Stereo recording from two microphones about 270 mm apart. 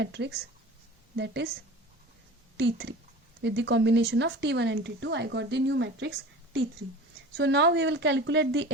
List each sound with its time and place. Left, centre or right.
0.0 s speech: right
2.6 s speech: right